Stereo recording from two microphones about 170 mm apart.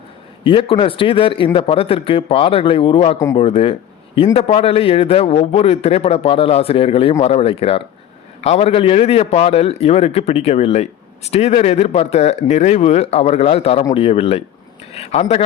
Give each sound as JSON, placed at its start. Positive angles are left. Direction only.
{"t": 0.4, "sound": "a man's voice", "side_deg": 30}